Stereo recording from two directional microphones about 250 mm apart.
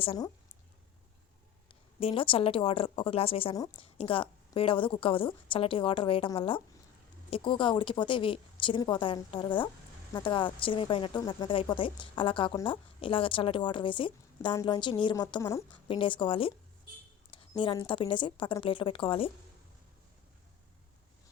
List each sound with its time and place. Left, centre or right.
0.0 s speech: left
1.6 s speech: left